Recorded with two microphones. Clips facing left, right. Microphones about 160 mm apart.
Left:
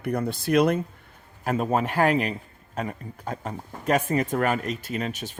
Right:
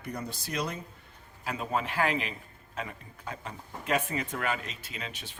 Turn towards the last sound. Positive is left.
turn(degrees=45)  # may be behind; listen again after turning